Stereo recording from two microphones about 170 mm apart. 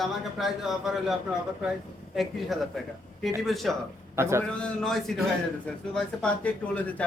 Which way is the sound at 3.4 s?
Centre (ahead or behind).